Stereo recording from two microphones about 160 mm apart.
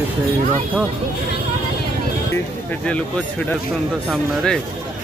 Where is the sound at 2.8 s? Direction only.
5° left (ahead or behind).